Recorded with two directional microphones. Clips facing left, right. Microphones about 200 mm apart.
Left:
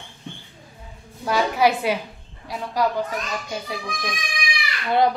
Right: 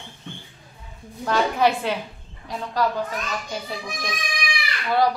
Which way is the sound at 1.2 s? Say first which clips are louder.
Left 1 dB; 10° left (ahead or behind).